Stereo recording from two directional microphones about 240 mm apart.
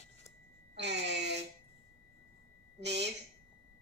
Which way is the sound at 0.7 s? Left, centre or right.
Right.